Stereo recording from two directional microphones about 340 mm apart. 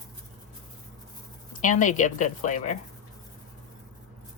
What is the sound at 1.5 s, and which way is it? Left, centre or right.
A woman's voice, left.